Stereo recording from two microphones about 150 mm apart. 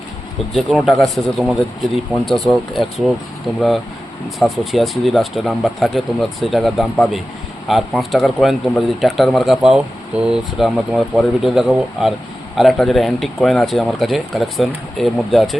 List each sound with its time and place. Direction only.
0.5 s speech: centre (ahead or behind)
4.4 s speech: centre (ahead or behind)